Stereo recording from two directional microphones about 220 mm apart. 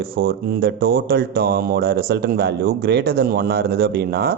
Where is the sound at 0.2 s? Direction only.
45° right (ahead or behind).